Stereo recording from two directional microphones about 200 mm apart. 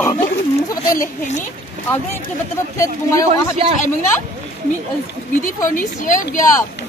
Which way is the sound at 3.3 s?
30° right (ahead or behind).